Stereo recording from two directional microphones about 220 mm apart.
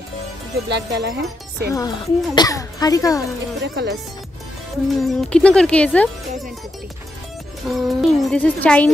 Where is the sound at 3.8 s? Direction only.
50° right (ahead or behind).